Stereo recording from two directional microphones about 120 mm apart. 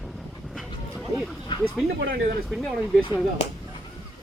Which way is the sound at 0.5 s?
Centre (ahead or behind).